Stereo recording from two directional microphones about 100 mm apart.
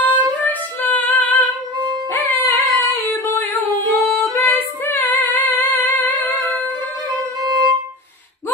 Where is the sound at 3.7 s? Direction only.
35° right (ahead or behind).